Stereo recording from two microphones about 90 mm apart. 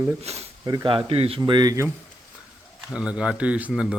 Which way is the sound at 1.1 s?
90° right.